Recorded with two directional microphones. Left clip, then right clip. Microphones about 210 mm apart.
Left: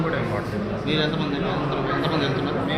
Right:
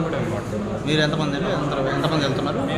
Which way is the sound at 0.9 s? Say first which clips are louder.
Right 3 dB; 50° right (ahead or behind).